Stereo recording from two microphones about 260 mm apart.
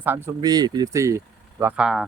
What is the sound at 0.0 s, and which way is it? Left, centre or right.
Speech, centre.